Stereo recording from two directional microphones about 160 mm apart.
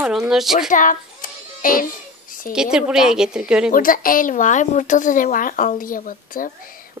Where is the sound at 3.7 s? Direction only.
60° left (ahead or behind).